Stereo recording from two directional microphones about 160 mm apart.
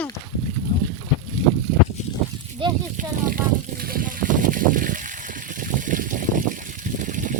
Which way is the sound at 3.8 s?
65° right (ahead or behind).